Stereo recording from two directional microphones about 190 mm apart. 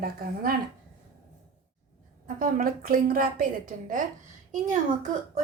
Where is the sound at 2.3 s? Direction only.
45° right (ahead or behind).